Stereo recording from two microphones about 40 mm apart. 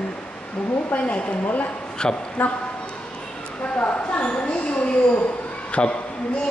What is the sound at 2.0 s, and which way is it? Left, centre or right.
Speech, left.